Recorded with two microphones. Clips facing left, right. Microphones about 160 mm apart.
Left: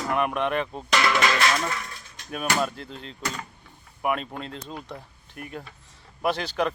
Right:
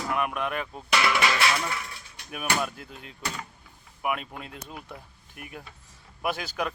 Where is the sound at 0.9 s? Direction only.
10° right (ahead or behind).